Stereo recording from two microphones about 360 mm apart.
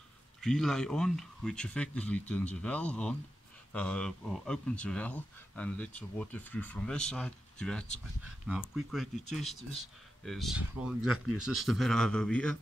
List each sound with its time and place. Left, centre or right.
0.4 s speech: centre